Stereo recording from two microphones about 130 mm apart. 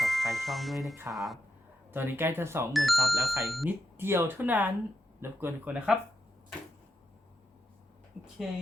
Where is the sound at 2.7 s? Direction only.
Centre (ahead or behind).